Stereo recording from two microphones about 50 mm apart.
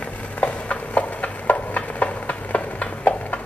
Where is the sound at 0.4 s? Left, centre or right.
Left.